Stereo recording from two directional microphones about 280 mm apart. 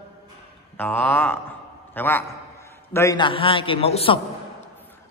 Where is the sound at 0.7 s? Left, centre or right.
Centre.